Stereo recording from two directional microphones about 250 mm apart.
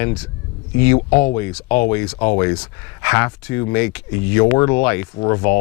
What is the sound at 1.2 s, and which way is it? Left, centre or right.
Speech, centre.